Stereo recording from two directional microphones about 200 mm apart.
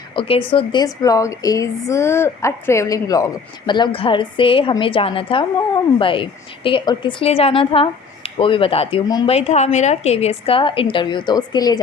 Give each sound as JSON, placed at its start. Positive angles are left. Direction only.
{"t": 0.2, "sound": "a woman's voice", "side_deg": 25}